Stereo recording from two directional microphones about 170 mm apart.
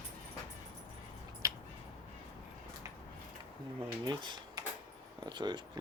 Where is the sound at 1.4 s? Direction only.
20° right (ahead or behind).